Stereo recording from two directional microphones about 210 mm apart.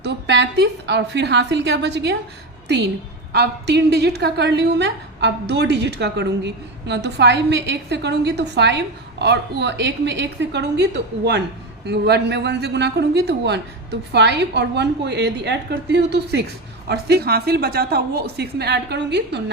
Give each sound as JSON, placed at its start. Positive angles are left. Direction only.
{"t": 0.0, "sound": "a woman's voice", "side_deg": -55}